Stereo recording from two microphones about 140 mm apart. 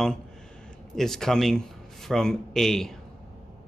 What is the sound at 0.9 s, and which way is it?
Speech, 5° left (ahead or behind).